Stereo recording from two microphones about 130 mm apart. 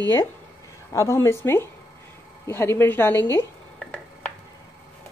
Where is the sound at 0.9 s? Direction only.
20° left (ahead or behind).